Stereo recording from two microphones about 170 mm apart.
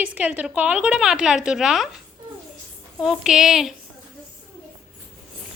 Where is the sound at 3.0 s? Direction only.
Centre (ahead or behind).